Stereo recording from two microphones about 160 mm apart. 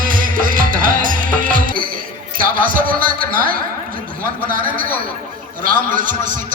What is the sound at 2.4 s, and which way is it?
Speech, 60° right (ahead or behind).